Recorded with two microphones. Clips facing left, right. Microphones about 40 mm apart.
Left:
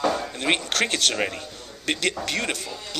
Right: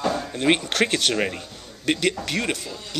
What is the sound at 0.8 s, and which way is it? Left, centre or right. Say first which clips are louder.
A man's voice: right 3 dB; centre.